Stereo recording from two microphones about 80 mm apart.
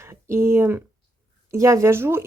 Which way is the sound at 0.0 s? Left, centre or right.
Right.